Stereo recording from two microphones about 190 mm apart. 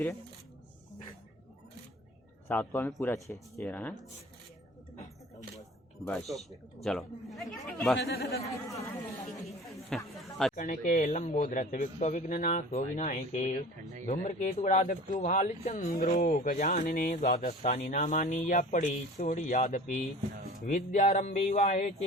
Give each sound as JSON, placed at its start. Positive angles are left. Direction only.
{"t": 2.5, "sound": "speech", "side_deg": 10}
{"t": 6.1, "sound": "speech", "side_deg": 0}
{"t": 7.9, "sound": "speech", "side_deg": 60}
{"t": 8.7, "sound": "speech", "side_deg": 15}
{"t": 9.6, "sound": "a sound", "side_deg": 0}
{"t": 10.5, "sound": "speech", "side_deg": 40}